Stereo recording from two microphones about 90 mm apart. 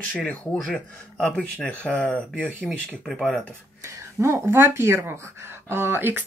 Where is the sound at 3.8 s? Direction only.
35° right (ahead or behind).